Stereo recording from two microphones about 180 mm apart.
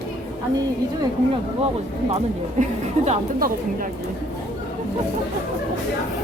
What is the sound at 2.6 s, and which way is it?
A woman's voice, 40° right (ahead or behind).